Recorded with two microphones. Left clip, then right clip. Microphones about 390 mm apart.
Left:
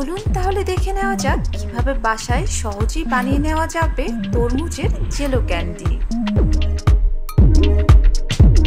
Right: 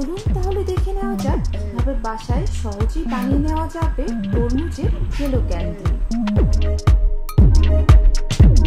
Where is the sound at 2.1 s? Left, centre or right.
Left.